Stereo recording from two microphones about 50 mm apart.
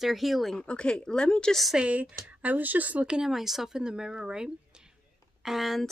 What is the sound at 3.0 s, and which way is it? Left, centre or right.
A woman's voice, centre.